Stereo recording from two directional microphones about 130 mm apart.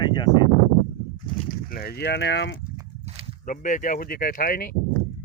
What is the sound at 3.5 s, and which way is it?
Speech, 85° left.